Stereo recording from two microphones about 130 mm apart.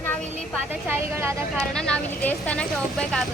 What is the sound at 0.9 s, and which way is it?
Speech, 20° right (ahead or behind).